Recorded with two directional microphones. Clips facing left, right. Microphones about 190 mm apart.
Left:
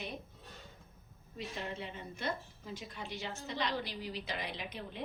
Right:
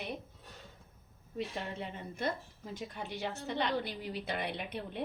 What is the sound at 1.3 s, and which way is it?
A woman's voice, 50° right (ahead or behind).